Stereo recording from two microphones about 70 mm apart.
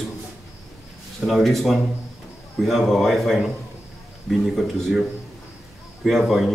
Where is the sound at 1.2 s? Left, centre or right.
Centre.